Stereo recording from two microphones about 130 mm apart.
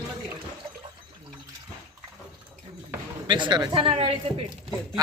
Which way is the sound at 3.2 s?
35° right (ahead or behind).